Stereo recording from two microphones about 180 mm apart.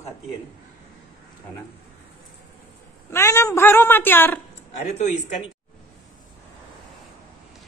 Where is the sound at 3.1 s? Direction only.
15° left (ahead or behind).